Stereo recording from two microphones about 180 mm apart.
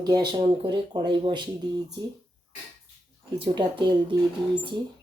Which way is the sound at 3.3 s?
30° right (ahead or behind).